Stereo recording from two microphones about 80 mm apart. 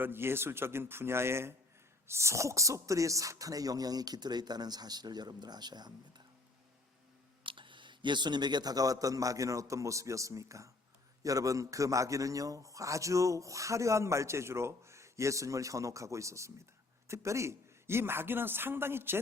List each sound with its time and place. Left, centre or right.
0.0 s a man's voice: right
7.4 s a man's voice: right